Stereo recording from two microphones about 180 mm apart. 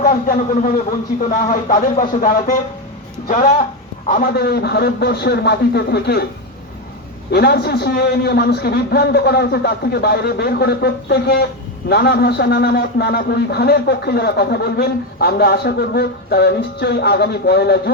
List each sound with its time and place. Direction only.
0.0 s speech: 50° left (ahead or behind)
4.1 s a man's voice: 60° left (ahead or behind)
7.3 s a man's voice: 65° left (ahead or behind)